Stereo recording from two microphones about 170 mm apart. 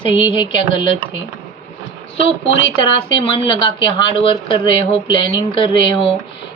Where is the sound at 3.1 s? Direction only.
30° left (ahead or behind).